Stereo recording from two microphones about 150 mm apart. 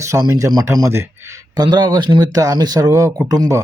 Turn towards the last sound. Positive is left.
turn(degrees=-25)  # may be behind; listen again after turning